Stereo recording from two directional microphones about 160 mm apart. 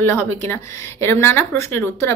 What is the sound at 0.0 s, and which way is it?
Speech, 15° left (ahead or behind).